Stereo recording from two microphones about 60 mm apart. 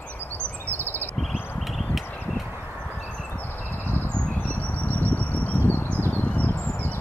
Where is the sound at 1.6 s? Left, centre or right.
Centre.